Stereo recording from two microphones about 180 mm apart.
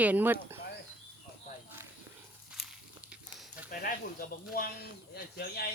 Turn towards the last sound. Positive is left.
turn(degrees=60)  # may be behind; listen again after turning